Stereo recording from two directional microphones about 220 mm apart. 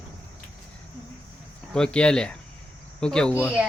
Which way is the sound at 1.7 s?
5° left (ahead or behind).